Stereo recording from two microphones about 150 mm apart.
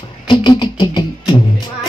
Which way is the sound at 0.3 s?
30° left (ahead or behind).